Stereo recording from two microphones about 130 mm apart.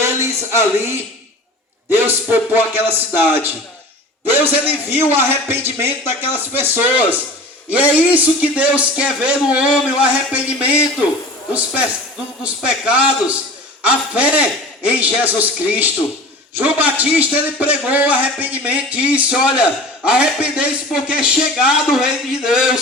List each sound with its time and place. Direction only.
0.0 s a sound: 20° right (ahead or behind)
1.9 s a man's voice: 15° right (ahead or behind)
12.4 s a man's voice: 10° right (ahead or behind)